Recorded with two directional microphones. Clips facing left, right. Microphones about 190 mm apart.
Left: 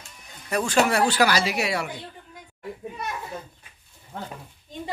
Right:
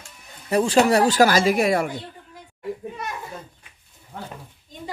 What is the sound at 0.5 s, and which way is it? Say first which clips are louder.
Speech: right 5 dB; 30° right (ahead or behind).